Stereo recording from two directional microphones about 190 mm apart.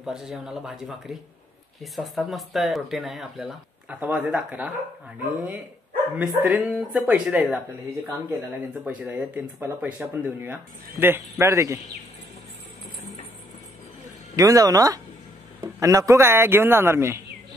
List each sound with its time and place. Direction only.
0.0 s speech: centre (ahead or behind)
6.1 s speech: 5° right (ahead or behind)
8.8 s speech: 5° right (ahead or behind)
14.3 s speech: 20° right (ahead or behind)